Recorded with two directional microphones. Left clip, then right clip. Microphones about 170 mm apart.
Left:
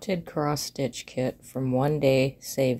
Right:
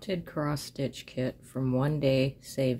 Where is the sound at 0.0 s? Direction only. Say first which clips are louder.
Left 5 dB; 15° left (ahead or behind).